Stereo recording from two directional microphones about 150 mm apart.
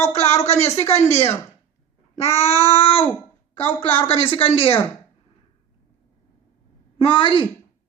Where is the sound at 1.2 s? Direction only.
20° left (ahead or behind).